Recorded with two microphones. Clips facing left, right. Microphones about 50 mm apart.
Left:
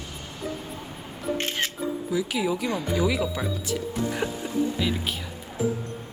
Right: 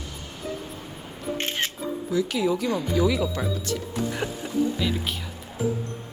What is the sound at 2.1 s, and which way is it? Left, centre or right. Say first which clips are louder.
Speech: right 3 dB; centre.